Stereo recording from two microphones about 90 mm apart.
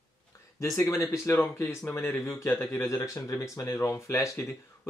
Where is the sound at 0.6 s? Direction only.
40° left (ahead or behind).